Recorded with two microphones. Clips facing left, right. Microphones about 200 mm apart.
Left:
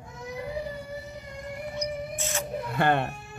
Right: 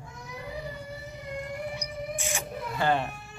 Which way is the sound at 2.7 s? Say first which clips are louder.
Left 2 dB; 60° left (ahead or behind).